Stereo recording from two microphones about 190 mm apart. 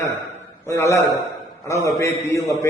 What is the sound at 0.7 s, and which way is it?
A man's voice, 15° left (ahead or behind).